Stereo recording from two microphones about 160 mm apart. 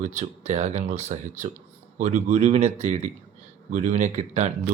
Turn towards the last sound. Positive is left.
turn(degrees=-45)  # may be behind; listen again after turning